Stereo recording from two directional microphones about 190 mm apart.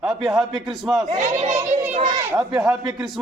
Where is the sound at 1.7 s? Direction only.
35° right (ahead or behind).